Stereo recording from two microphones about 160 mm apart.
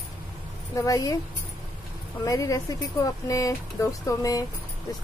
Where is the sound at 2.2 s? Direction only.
20° left (ahead or behind).